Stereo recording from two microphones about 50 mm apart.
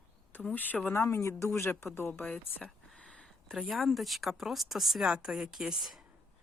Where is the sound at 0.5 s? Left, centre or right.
Left.